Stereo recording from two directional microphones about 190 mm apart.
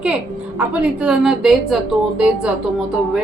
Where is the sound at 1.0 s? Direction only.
Centre (ahead or behind).